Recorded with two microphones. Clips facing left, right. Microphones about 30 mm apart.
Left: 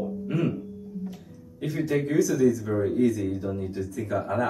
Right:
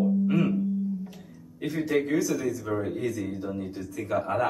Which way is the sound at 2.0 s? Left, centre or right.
Centre.